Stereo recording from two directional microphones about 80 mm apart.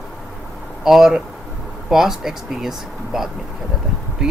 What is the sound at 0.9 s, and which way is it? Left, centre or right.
Speech, centre.